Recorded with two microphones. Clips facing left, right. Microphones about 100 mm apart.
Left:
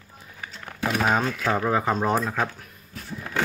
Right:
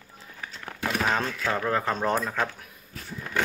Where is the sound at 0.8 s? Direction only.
10° left (ahead or behind).